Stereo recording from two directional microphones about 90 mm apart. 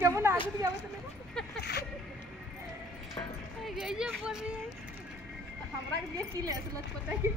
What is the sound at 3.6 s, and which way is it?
Speech, 5° right (ahead or behind).